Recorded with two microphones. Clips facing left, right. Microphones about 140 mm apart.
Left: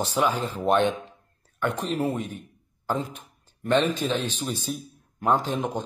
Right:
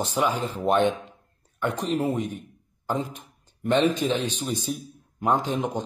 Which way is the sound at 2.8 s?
15° right (ahead or behind).